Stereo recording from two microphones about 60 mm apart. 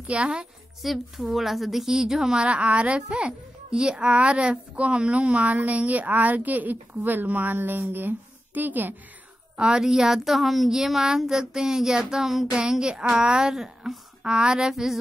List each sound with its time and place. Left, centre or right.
0.0 s a woman's voice: centre
0.8 s a woman's voice: centre; by 8.9 s right
9.6 s a woman's voice: centre